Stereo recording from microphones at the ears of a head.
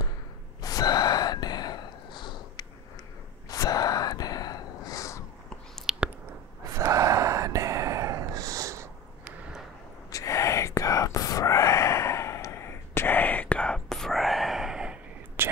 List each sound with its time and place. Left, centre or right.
0.6 s gasp: left
6.6 s gasp: right
10.1 s whispering: left
13.6 s whispering: centre